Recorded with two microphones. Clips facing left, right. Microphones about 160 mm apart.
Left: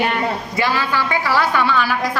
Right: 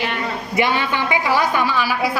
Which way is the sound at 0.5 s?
20° right (ahead or behind).